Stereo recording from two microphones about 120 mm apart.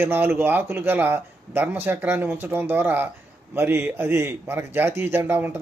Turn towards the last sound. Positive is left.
turn(degrees=-15)  # may be behind; listen again after turning